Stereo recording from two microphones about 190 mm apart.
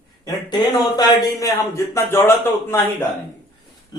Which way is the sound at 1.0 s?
20° left (ahead or behind).